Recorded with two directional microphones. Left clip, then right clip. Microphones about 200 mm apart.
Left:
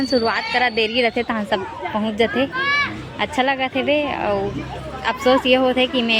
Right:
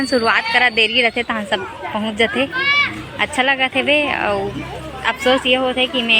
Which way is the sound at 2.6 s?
45° left (ahead or behind).